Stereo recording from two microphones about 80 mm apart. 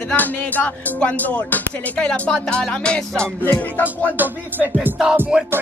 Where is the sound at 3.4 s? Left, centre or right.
Left.